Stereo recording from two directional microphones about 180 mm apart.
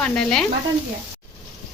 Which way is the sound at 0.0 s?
5° left (ahead or behind).